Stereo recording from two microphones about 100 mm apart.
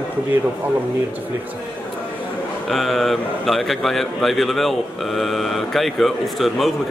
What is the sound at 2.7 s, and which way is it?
A man's voice, centre (ahead or behind).